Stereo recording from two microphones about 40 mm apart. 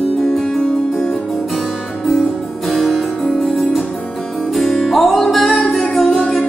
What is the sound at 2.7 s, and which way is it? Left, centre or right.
Music, centre.